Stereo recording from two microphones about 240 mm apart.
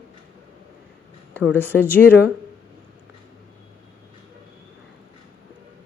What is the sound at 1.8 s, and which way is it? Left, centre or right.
Speech, centre.